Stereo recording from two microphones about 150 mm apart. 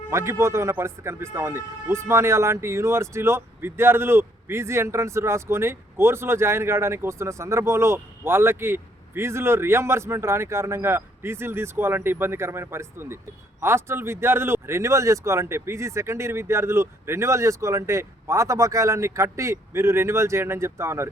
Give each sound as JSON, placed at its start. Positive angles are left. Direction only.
{"t": 0.1, "sound": "speech", "side_deg": -20}